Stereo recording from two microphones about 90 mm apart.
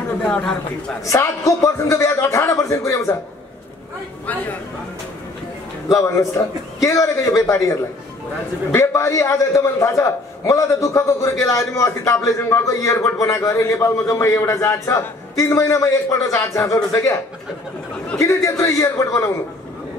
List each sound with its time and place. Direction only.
0.2 s speech: 10° left (ahead or behind)
1.0 s a man's voice: 35° left (ahead or behind)
5.9 s a man's voice: 35° left (ahead or behind)
18.2 s a man's voice: 35° left (ahead or behind)